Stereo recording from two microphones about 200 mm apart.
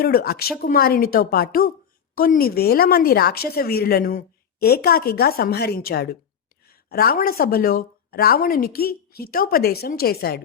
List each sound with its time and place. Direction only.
0.0 s speech: 45° left (ahead or behind)